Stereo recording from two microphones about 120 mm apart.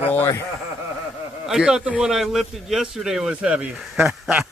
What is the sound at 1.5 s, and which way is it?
A man's voice, 5° right (ahead or behind).